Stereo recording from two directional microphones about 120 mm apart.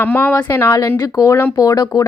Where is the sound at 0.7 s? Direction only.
30° left (ahead or behind).